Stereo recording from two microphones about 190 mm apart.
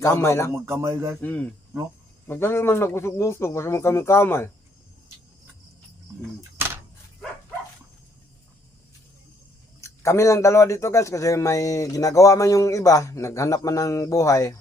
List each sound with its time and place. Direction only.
0.0 s speech: 15° left (ahead or behind)
0.5 s speech: 10° right (ahead or behind)
1.2 s speech: 5° left (ahead or behind)
9.8 s speech: 15° left (ahead or behind)